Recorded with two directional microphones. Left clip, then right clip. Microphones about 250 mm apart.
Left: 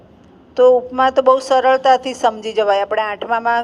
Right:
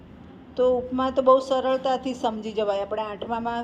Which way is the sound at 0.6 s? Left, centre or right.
Left.